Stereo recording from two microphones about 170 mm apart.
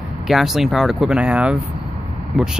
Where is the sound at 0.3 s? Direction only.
Centre (ahead or behind).